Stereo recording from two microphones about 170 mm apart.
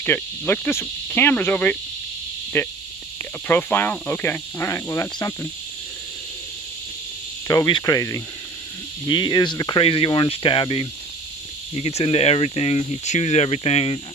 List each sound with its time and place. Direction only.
0.0 s speech: 10° left (ahead or behind)
7.4 s speech: 20° left (ahead or behind)